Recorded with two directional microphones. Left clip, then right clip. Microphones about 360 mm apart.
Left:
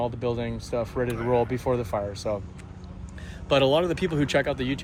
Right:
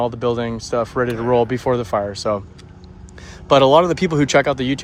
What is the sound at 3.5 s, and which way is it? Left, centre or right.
Speech, centre.